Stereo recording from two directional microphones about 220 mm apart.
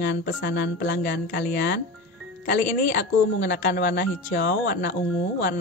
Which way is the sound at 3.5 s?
40° left (ahead or behind).